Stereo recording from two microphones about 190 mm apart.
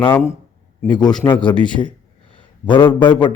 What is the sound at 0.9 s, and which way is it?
Speech, 20° left (ahead or behind).